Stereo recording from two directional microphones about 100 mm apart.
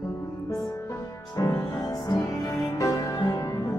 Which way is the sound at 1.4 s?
35° left (ahead or behind).